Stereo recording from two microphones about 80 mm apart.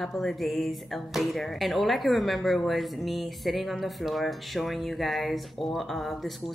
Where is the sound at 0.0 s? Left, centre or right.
Centre.